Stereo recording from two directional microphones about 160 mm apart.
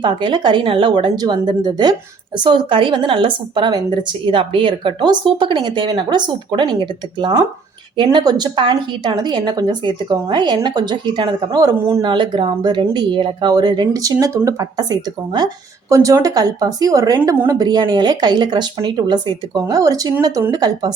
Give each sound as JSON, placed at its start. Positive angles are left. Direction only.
{"t": 0.0, "sound": "a woman's voice", "side_deg": -30}